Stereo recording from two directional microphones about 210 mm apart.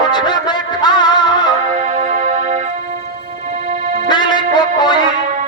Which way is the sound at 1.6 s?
35° right (ahead or behind).